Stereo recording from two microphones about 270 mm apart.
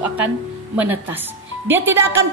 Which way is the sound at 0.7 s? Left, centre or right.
Centre.